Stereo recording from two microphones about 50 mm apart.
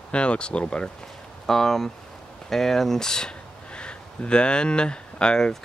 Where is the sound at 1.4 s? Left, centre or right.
Centre.